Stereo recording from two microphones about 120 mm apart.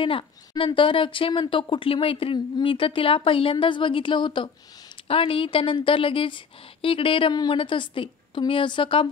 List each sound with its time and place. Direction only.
0.0 s a woman's voice: 45° left (ahead or behind)